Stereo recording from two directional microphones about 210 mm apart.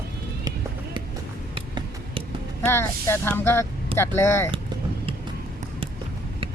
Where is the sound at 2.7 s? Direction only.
10° left (ahead or behind).